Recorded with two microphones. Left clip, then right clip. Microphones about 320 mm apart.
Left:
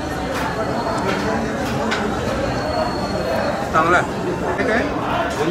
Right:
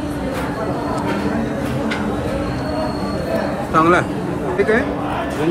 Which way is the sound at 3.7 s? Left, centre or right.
Right.